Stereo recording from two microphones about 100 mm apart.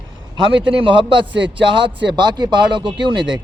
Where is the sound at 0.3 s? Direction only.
60° right (ahead or behind).